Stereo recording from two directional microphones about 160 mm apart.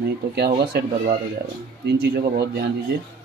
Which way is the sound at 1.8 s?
90° right.